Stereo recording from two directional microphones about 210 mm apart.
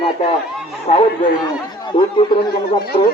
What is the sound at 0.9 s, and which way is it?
A man's voice, 30° left (ahead or behind).